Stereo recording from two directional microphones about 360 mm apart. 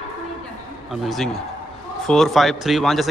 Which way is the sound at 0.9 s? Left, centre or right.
Centre.